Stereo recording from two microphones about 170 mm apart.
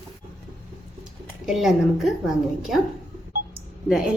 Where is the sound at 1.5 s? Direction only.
Centre (ahead or behind).